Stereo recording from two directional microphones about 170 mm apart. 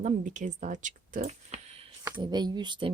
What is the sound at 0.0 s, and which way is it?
Speech, 50° right (ahead or behind).